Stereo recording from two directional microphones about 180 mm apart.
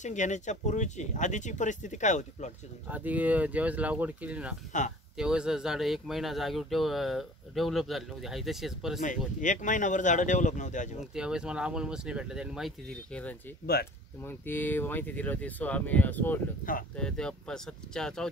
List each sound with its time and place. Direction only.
0.0 s speech: 40° left (ahead or behind)
2.9 s speech: 10° right (ahead or behind)
9.4 s speech: 45° left (ahead or behind)
11.1 s speech: 5° right (ahead or behind)